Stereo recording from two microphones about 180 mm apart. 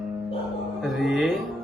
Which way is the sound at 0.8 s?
Centre (ahead or behind).